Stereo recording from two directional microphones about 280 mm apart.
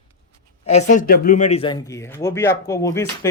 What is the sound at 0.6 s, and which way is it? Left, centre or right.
Speech, left.